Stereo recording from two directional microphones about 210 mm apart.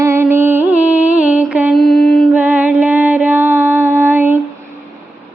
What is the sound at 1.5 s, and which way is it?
Mantra, 5° right (ahead or behind).